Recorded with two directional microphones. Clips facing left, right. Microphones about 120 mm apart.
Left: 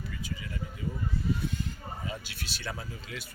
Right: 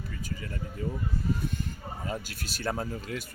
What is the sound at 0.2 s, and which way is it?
Speech, 45° right (ahead or behind).